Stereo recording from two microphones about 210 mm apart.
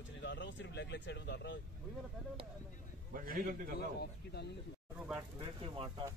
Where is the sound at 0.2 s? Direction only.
55° left (ahead or behind).